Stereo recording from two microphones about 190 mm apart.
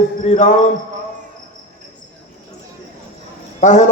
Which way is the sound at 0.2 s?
40° left (ahead or behind).